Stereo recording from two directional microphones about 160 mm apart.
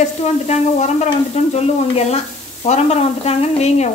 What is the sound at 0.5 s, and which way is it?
Stir, 45° left (ahead or behind).